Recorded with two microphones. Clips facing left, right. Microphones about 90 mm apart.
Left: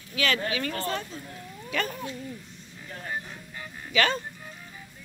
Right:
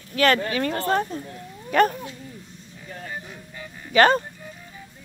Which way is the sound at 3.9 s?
45° right (ahead or behind).